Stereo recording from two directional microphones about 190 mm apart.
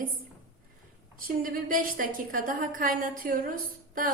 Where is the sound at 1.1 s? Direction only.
45° right (ahead or behind).